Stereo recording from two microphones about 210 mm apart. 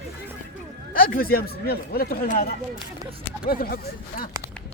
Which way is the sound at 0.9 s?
45° left (ahead or behind).